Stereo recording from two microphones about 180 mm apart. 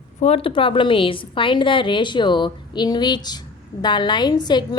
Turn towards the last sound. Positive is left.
turn(degrees=25)  # may be behind; listen again after turning